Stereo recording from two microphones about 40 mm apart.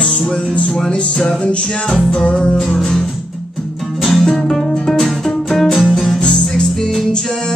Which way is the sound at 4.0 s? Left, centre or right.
Centre.